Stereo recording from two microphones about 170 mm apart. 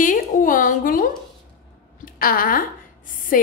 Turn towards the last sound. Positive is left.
turn(degrees=55)  # may be behind; listen again after turning